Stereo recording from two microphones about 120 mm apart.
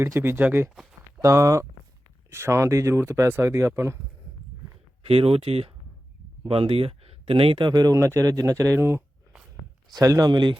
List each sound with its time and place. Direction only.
0.0 s speech: 20° right (ahead or behind)
5.0 s speech: 55° right (ahead or behind)